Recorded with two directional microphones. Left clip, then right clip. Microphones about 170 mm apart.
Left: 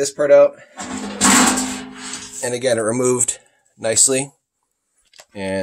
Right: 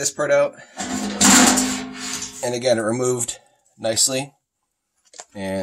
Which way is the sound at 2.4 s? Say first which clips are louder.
Left 1 dB; 35° left (ahead or behind).